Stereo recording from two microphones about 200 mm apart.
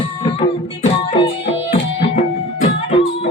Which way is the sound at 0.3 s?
25° left (ahead or behind).